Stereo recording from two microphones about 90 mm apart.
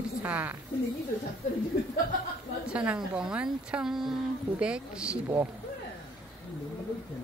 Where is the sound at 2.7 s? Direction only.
15° right (ahead or behind).